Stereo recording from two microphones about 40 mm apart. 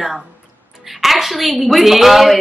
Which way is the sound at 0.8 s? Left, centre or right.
Centre.